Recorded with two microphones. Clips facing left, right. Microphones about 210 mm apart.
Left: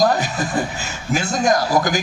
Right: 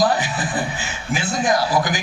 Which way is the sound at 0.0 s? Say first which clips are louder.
Left 2 dB; 45° left (ahead or behind).